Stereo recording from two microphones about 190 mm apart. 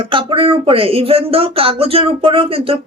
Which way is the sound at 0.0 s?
25° right (ahead or behind).